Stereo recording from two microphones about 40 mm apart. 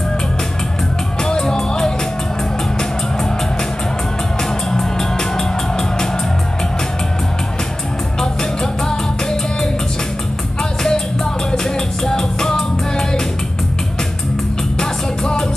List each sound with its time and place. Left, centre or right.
1.2 s music: centre
4.4 s music: centre
8.2 s music: centre
10.6 s music: centre
14.8 s music: centre